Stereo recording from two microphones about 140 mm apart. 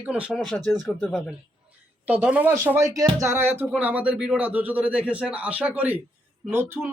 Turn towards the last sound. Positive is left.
turn(degrees=-15)  # may be behind; listen again after turning